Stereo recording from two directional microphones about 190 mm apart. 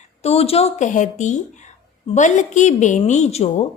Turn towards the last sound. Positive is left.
turn(degrees=35)  # may be behind; listen again after turning